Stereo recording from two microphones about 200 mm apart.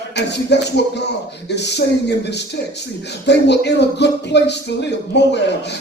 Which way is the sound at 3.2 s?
60° left (ahead or behind).